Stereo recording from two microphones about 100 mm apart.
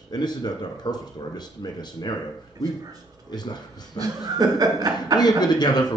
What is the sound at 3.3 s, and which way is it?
Speech, 45° left (ahead or behind).